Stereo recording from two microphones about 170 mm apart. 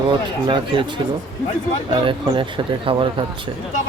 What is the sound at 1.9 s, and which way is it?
Speech, 30° right (ahead or behind).